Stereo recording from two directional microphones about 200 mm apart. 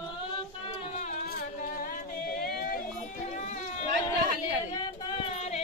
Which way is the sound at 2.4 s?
45° left (ahead or behind).